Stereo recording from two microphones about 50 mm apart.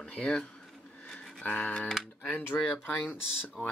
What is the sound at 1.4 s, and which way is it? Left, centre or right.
Speech, left.